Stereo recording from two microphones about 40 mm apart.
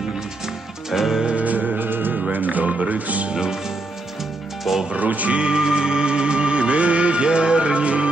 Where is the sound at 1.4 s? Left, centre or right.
Right.